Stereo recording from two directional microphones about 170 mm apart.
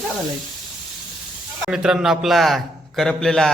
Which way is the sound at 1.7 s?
5° right (ahead or behind).